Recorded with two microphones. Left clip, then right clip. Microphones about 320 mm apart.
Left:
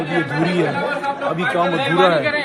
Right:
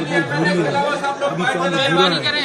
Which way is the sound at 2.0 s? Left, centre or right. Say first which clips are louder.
Left 1 dB; left.